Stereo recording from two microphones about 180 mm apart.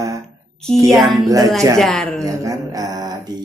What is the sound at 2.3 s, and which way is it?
Mantra, 20° right (ahead or behind).